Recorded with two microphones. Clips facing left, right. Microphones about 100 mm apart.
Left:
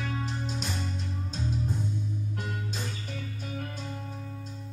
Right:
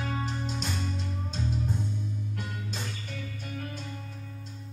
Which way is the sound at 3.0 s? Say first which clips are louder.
Left 1 dB; 45° left (ahead or behind).